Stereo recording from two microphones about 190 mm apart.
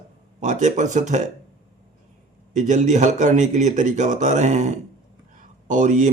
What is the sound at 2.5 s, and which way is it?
Speech, 40° right (ahead or behind).